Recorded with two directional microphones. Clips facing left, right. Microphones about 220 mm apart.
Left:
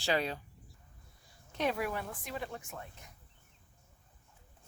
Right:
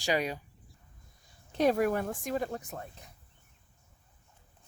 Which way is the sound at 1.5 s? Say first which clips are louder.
Right 8 dB; 40° right (ahead or behind).